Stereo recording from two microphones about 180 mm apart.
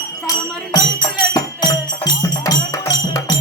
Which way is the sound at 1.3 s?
20° left (ahead or behind).